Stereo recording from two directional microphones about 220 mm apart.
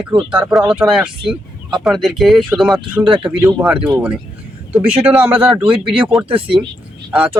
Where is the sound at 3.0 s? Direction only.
20° right (ahead or behind).